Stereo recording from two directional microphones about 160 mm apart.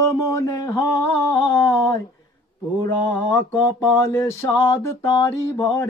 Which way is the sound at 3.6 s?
15° left (ahead or behind).